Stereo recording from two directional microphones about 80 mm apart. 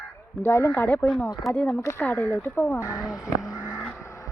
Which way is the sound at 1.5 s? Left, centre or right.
Centre.